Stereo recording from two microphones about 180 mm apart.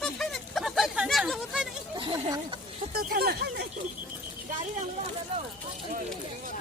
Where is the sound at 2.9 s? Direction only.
55° right (ahead or behind).